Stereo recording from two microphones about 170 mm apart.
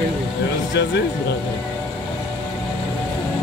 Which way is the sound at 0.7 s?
90° left.